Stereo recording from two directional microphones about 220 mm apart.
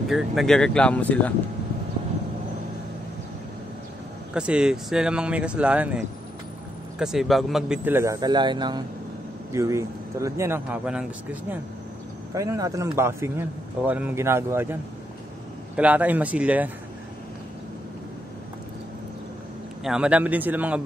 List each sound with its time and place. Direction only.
0.1 s speech: centre (ahead or behind)
4.3 s speech: 5° right (ahead or behind)
7.0 s speech: centre (ahead or behind)
12.4 s speech: 15° right (ahead or behind)
19.8 s speech: 5° right (ahead or behind)